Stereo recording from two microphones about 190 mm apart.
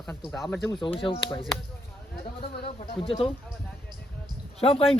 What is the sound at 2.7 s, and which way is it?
Speech, 30° left (ahead or behind).